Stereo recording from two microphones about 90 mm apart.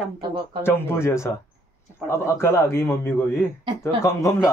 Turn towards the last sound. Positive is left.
turn(degrees=35)  # may be behind; listen again after turning